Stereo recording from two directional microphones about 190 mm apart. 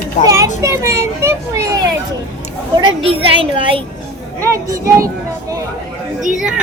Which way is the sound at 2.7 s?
25° right (ahead or behind).